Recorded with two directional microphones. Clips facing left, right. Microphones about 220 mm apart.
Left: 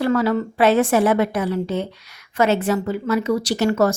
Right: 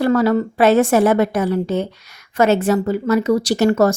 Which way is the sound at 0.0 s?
45° right (ahead or behind).